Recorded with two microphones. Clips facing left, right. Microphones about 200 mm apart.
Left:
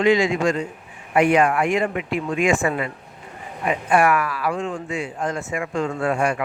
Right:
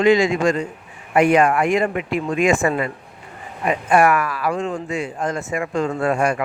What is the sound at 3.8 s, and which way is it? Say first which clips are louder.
Speech: right 2 dB; 45° right (ahead or behind).